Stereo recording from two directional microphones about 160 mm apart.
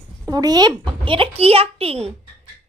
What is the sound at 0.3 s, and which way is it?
A woman's voice, 25° right (ahead or behind).